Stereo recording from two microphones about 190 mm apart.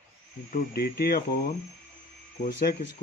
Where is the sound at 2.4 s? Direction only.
50° left (ahead or behind).